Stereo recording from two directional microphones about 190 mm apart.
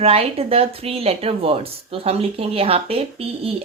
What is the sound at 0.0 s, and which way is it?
Speech, 30° right (ahead or behind).